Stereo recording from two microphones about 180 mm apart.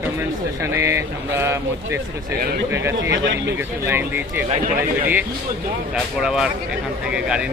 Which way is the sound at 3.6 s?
10° right (ahead or behind).